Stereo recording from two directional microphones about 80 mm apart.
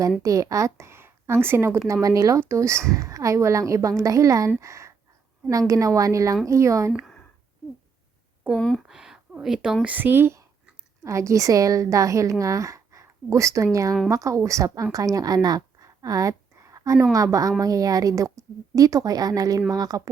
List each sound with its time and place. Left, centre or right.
0.2 s a woman's voice: right
1.9 s a woman's voice: right
8.5 s speech: centre
8.9 s a sound: centre
9.8 s speech: right
11.0 s a woman's voice: right